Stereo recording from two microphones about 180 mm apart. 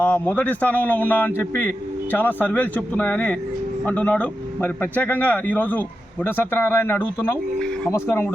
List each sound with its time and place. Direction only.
0.0 s a man's voice: 10° left (ahead or behind)